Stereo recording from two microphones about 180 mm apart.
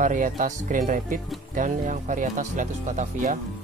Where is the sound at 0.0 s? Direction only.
45° right (ahead or behind).